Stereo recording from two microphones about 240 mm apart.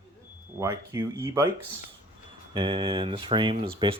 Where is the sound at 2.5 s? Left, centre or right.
Right.